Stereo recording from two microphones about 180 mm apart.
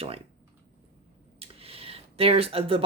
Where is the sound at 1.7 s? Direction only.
35° right (ahead or behind).